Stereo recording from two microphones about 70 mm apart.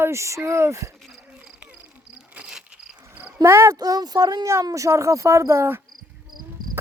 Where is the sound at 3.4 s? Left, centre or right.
Right.